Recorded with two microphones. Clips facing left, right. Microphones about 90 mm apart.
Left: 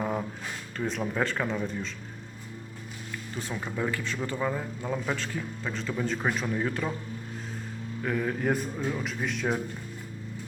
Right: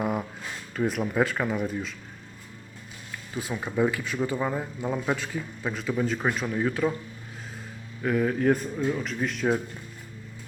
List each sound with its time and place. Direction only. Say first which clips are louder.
0.0 s a sound: right 2 dB; 10° right (ahead or behind)
0.8 s speech: right 4 dB; 10° right (ahead or behind)
3.3 s speech: right 6 dB; 10° right (ahead or behind)
8.0 s speech: right 5 dB; centre (ahead or behind)